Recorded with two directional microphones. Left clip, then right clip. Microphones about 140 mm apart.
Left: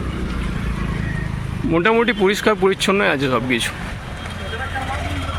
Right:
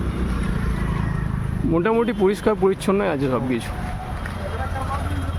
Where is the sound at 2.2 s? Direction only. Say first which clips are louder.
Left 3 dB; 10° right (ahead or behind).